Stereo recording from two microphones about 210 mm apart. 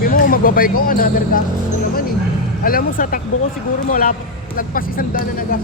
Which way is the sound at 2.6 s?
45° left (ahead or behind).